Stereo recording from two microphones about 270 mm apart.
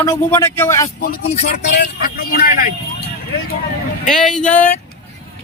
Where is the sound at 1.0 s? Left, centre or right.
Left.